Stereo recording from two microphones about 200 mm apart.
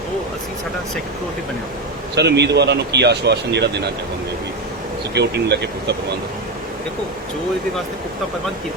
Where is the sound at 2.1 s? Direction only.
55° right (ahead or behind).